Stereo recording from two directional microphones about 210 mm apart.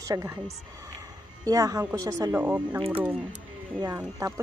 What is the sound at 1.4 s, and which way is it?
Speech, 15° right (ahead or behind).